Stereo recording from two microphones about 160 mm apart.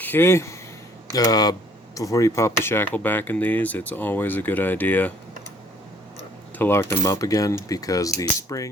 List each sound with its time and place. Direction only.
0.0 s speech: 15° left (ahead or behind)
6.6 s speech: 15° left (ahead or behind)